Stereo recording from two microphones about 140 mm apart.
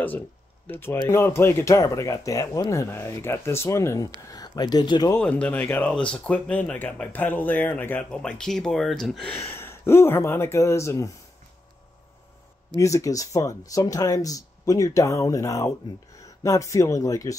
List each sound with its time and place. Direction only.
0.7 s speech: 15° left (ahead or behind)
5.2 s speech: 10° left (ahead or behind)
9.3 s speech: 15° left (ahead or behind)
12.7 s speech: 25° left (ahead or behind)